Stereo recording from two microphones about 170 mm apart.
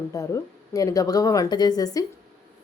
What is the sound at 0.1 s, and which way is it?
Speech, 20° left (ahead or behind).